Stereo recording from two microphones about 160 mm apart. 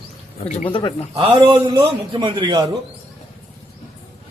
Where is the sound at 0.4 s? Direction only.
35° left (ahead or behind).